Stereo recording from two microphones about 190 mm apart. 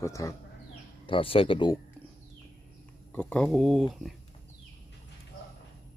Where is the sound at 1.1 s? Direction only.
30° left (ahead or behind).